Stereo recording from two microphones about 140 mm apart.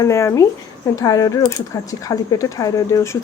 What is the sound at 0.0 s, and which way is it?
Speech, 20° left (ahead or behind).